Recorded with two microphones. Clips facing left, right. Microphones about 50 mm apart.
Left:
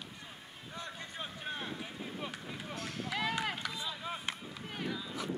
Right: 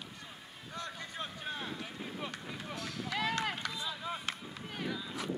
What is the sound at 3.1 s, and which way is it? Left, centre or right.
Run, centre.